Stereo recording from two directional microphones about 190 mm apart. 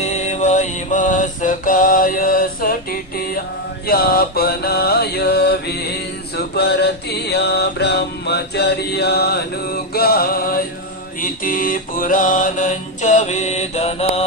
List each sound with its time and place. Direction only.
0.0 s music: 35° left (ahead or behind)
3.8 s mantra: 55° left (ahead or behind); by 14.2 s 35° left (ahead or behind)